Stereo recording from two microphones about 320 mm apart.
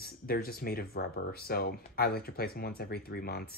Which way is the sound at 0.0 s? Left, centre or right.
Left.